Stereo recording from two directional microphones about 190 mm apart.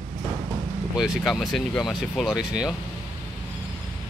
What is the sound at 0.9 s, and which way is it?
Speech, 5° right (ahead or behind).